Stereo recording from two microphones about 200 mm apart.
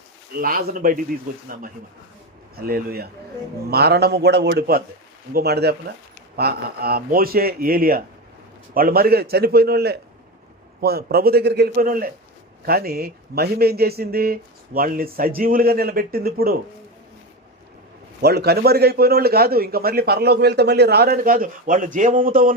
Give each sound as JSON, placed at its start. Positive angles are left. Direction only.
{"t": 0.3, "sound": "a man's voice", "side_deg": -45}
{"t": 2.6, "sound": "a man's voice", "side_deg": -50}
{"t": 18.2, "sound": "a man's voice", "side_deg": -55}